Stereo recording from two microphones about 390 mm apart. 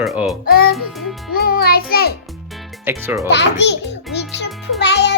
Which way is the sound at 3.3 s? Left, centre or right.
Left.